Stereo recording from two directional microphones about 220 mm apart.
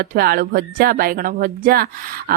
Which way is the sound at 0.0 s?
40° right (ahead or behind).